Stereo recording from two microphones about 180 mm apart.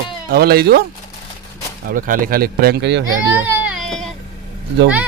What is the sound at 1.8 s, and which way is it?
A man's voice, 50° right (ahead or behind).